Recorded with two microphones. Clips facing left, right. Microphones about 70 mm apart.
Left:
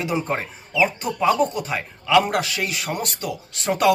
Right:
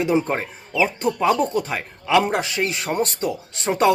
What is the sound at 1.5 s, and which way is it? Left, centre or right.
Speech, right.